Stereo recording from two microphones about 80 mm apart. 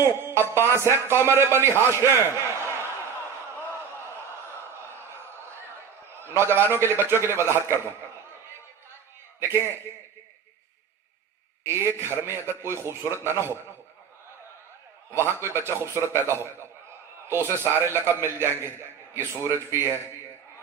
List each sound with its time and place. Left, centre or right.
0.0 s music: right
0.8 s a man's voice: right
5.0 s a sound: right
6.2 s a man's voice: right
9.4 s a man's voice: right
11.6 s a man's voice: right
15.1 s a man's voice: right